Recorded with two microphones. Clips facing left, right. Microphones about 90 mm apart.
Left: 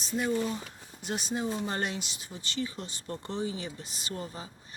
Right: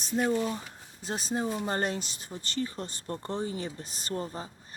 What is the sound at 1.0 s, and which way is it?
Speech, 35° right (ahead or behind).